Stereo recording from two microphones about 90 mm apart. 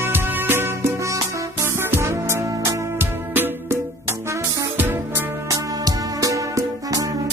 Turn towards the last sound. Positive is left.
turn(degrees=-40)  # may be behind; listen again after turning